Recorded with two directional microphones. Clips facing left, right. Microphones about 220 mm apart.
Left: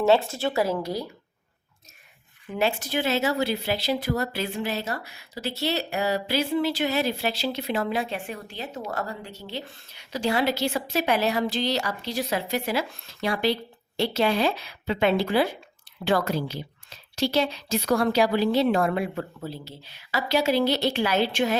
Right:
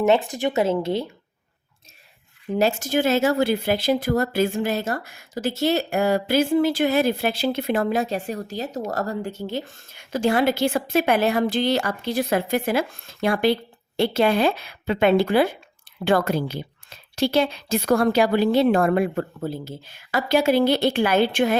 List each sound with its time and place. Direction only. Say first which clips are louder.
0.0 s speech: right 2 dB; 15° right (ahead or behind)
2.6 s speech: right 5 dB; 45° right (ahead or behind)